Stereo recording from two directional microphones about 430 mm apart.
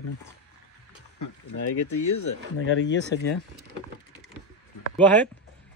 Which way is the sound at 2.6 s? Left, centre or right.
Left.